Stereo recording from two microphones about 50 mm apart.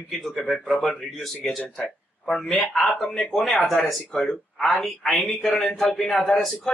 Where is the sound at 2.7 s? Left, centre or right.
Centre.